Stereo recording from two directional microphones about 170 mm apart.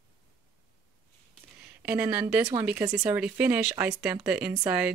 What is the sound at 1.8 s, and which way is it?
Speech, 10° right (ahead or behind).